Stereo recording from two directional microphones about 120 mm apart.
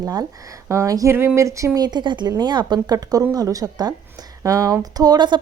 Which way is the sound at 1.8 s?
35° right (ahead or behind).